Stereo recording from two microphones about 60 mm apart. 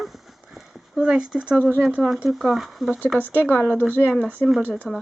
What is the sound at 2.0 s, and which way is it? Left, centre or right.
Speech, centre.